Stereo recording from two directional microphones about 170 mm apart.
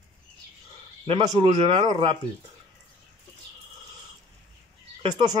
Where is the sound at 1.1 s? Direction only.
30° right (ahead or behind).